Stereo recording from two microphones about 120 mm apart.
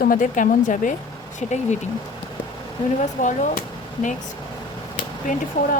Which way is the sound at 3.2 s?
90° left.